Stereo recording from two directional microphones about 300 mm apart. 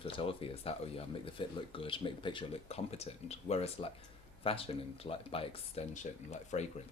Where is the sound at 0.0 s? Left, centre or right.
Centre.